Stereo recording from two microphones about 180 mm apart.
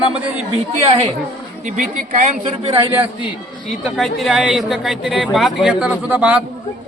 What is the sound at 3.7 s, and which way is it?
Speech, centre (ahead or behind).